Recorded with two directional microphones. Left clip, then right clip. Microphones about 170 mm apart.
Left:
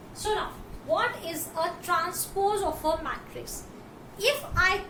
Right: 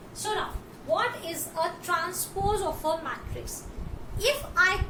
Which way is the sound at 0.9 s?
10° left (ahead or behind).